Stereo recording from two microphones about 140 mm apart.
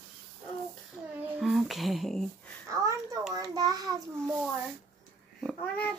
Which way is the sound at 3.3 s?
25° right (ahead or behind).